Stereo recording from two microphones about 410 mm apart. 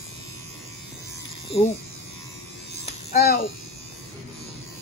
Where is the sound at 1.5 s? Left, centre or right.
Centre.